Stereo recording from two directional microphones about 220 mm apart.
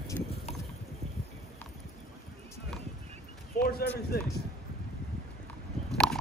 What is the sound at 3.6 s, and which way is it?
Basketball bounce, 45° left (ahead or behind).